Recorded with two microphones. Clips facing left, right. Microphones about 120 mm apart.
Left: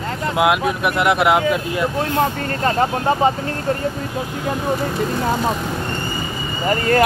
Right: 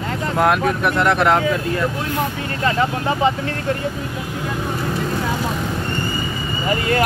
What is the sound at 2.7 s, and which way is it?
Speech, 40° left (ahead or behind).